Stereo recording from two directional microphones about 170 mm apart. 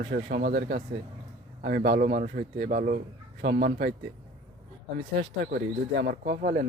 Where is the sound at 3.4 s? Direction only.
70° right (ahead or behind).